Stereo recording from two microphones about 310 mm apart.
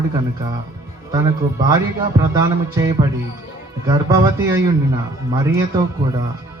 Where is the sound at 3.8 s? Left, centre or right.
Centre.